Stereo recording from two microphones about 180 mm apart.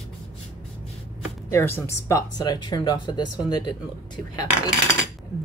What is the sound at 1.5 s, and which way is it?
Speech, 15° left (ahead or behind).